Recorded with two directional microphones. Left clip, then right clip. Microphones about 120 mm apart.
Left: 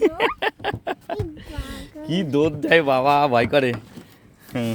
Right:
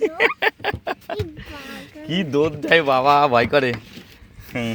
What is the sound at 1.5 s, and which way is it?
Speech, 20° left (ahead or behind).